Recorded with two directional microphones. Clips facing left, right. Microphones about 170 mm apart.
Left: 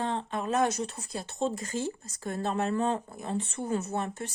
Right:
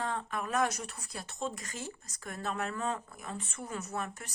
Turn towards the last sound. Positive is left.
turn(degrees=30)  # may be behind; listen again after turning